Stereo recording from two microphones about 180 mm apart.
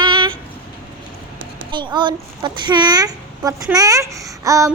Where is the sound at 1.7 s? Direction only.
25° right (ahead or behind).